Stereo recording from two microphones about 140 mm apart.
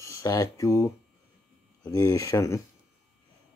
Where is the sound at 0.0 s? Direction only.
20° left (ahead or behind).